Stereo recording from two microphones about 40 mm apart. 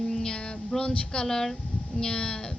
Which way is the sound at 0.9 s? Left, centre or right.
Left.